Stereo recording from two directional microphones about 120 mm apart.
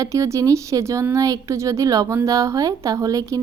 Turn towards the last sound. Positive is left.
turn(degrees=-30)  # may be behind; listen again after turning